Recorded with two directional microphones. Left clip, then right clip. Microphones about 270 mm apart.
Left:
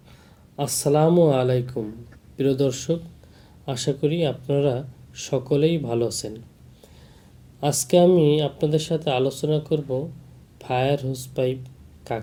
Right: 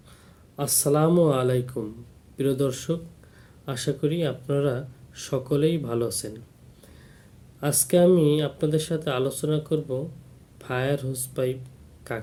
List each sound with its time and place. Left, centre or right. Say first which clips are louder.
0.5 s speech: left 3 dB; centre
7.6 s speech: left 3 dB; right
8.2 s speech: left 3 dB; centre